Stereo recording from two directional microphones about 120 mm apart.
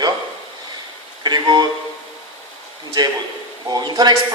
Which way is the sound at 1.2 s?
35° right (ahead or behind).